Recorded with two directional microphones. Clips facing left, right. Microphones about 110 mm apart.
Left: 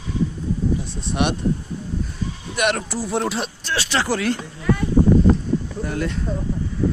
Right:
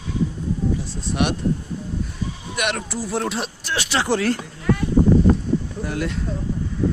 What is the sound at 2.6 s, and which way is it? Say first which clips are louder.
Speech: left 4 dB; 40° left (ahead or behind).